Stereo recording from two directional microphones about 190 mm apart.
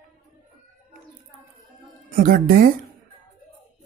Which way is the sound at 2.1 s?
50° right (ahead or behind).